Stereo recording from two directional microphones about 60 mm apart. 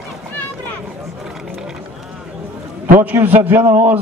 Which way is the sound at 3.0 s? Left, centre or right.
Right.